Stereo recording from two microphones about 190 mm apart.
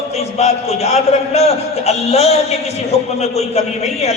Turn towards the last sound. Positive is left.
turn(degrees=35)  # may be behind; listen again after turning